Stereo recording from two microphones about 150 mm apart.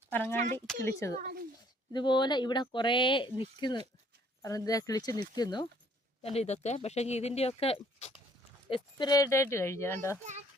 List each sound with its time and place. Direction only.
0.1 s speech: 15° left (ahead or behind)
1.2 s speech: 80° right
1.9 s speech: 30° left (ahead or behind)
6.2 s speech: 45° left (ahead or behind)
8.7 s speech: 30° left (ahead or behind)